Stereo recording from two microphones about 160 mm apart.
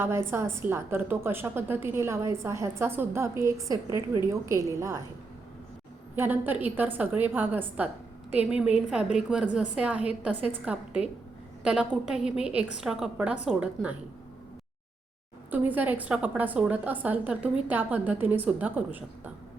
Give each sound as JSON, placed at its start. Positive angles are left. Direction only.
{"t": 0.0, "sound": "a woman's voice", "side_deg": -15}
{"t": 6.1, "sound": "a woman's voice", "side_deg": -10}
{"t": 15.5, "sound": "a woman's voice", "side_deg": -10}